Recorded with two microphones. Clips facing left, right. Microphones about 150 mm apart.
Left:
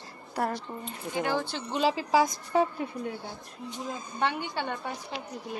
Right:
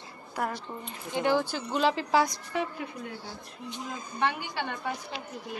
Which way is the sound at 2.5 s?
30° left (ahead or behind).